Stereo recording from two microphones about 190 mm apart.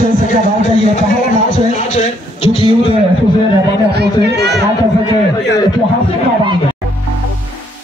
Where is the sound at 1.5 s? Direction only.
40° left (ahead or behind).